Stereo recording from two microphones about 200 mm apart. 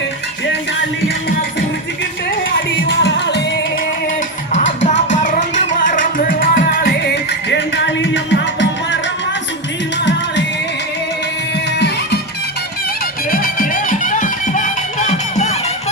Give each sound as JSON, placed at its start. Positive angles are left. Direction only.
{"t": 2.8, "sound": "music", "side_deg": 60}
{"t": 4.6, "sound": "music", "side_deg": 65}
{"t": 5.1, "sound": "music", "side_deg": 40}
{"t": 10.0, "sound": "music", "side_deg": 60}
{"t": 13.3, "sound": "music", "side_deg": 45}